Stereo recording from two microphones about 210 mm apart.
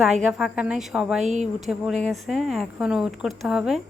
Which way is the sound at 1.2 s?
35° right (ahead or behind).